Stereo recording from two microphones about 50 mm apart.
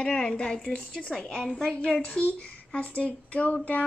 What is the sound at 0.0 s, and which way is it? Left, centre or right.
A child's voice, left.